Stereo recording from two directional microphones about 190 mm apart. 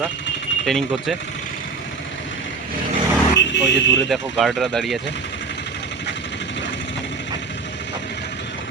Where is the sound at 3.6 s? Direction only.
70° left (ahead or behind).